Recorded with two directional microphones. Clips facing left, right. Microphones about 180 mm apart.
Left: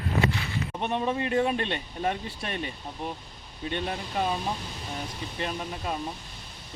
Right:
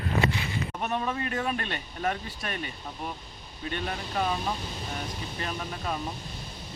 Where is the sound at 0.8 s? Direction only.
25° left (ahead or behind).